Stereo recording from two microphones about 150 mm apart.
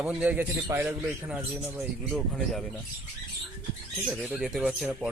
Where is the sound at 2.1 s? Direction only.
Centre (ahead or behind).